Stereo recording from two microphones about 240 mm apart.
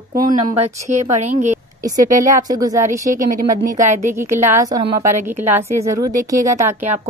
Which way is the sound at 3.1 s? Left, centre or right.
Right.